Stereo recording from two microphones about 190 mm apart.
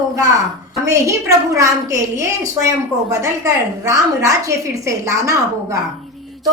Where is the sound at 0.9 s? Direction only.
15° right (ahead or behind).